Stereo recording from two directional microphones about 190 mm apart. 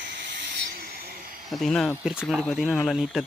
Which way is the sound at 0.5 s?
55° right (ahead or behind).